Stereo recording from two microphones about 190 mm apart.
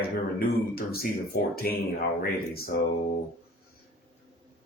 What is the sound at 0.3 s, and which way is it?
A man's voice, 50° left (ahead or behind).